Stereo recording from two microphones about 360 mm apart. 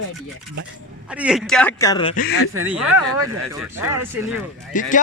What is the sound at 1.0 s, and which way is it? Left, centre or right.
Speech, centre.